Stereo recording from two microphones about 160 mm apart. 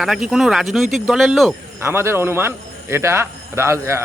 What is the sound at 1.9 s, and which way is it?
A man's voice, 15° right (ahead or behind).